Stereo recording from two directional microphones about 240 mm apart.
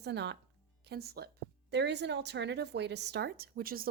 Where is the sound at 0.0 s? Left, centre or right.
Right.